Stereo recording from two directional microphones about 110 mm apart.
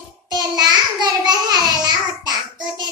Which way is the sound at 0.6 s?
40° right (ahead or behind).